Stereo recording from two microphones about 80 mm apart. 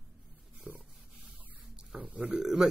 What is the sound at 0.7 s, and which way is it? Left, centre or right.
Speech, centre.